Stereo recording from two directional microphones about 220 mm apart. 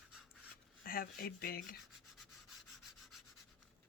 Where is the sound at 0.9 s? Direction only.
40° left (ahead or behind).